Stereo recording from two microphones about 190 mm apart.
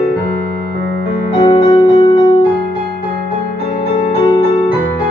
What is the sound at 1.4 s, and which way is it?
Music, 25° left (ahead or behind).